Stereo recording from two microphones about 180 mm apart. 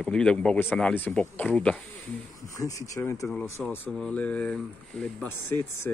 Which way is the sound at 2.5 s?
20° left (ahead or behind).